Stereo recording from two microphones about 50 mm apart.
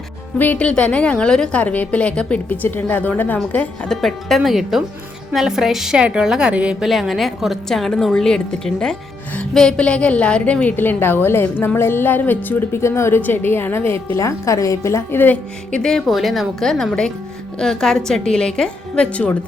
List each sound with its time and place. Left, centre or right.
0.3 s a woman's voice: left
0.6 s a woman's voice: left
1.6 s a woman's voice: left
2.8 s a woman's voice: left
3.8 s a woman's voice: centre; by 6.8 s right
6.8 s a woman's voice: centre; by 10.8 s left
10.8 s a woman's voice: left
12.7 s a woman's voice: left
14.2 s a woman's voice: left
15.8 s a woman's voice: centre
16.0 s a woman's voice: centre
19.1 s a woman's voice: left